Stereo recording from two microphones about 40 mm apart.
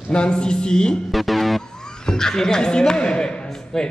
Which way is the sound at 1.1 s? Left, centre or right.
Centre.